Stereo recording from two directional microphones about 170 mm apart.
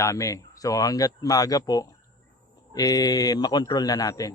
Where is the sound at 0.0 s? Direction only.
20° left (ahead or behind).